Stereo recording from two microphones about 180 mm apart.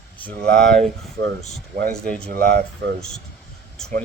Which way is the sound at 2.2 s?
55° right (ahead or behind).